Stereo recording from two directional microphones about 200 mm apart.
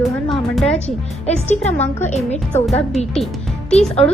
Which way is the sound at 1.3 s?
35° left (ahead or behind).